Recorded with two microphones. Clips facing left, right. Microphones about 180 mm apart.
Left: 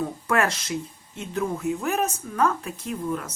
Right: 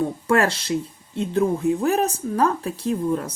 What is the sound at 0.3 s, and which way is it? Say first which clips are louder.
Speech: right 4 dB; 30° right (ahead or behind).